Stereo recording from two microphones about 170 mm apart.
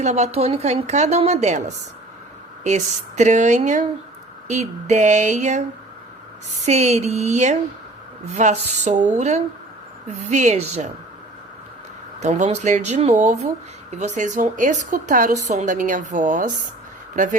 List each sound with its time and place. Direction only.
0.0 s a woman's voice: 40° right (ahead or behind)
6.7 s a woman's voice: 40° right (ahead or behind)
12.2 s a woman's voice: 40° right (ahead or behind)